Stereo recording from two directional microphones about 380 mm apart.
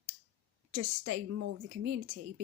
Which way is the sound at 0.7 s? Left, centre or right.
Right.